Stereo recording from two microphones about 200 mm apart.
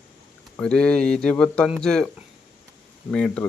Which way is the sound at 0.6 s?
5° left (ahead or behind).